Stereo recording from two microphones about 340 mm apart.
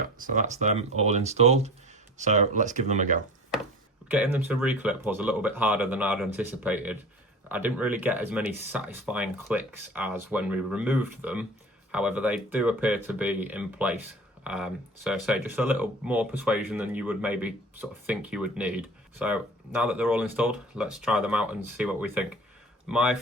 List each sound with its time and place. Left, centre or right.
0.2 s speech: right
4.1 s speech: centre